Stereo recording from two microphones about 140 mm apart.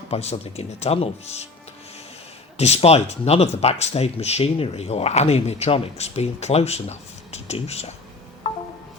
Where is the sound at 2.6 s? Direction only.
50° left (ahead or behind).